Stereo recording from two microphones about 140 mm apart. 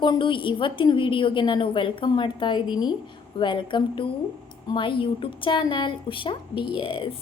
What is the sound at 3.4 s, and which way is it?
Speech, 35° left (ahead or behind).